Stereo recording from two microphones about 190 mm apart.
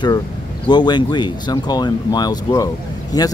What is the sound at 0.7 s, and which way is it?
Speech, 25° left (ahead or behind).